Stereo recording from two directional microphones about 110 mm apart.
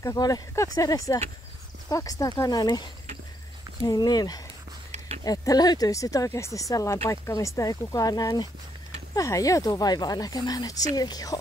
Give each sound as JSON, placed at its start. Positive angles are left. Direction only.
{"t": 0.0, "sound": "speech", "side_deg": 30}
{"t": 3.8, "sound": "speech", "side_deg": 35}
{"t": 4.9, "sound": "a sound", "side_deg": -75}
{"t": 5.2, "sound": "speech", "side_deg": 35}